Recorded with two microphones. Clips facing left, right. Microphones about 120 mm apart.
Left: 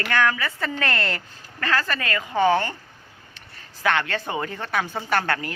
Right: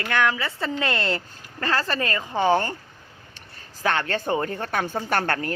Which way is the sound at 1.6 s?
35° right (ahead or behind).